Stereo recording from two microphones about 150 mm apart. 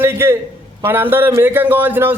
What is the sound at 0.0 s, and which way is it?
A man's voice, 15° right (ahead or behind).